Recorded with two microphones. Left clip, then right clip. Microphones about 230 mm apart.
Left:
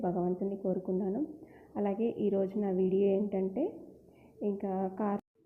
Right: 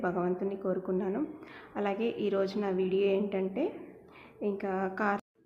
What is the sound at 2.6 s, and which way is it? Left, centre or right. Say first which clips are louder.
A woman's voice: right 1 dB; centre.